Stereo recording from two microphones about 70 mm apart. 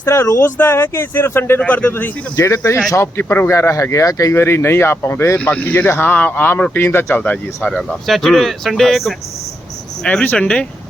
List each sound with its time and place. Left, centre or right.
0.0 s speech: left
2.3 s speech: left
3.2 s speech: left
4.4 s speech: left
5.5 s speech: left
7.2 s speech: left
7.7 s speech: centre
10.0 s speech: centre